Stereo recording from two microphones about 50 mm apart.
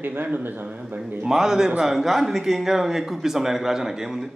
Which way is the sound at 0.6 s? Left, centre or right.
Right.